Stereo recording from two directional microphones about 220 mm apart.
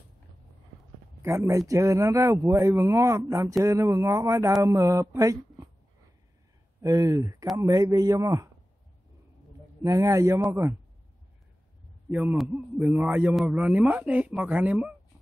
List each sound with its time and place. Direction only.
1.2 s a man's voice: 15° right (ahead or behind)
6.8 s a man's voice: 15° right (ahead or behind)
9.8 s a man's voice: 15° right (ahead or behind)
12.1 s a man's voice: 5° right (ahead or behind)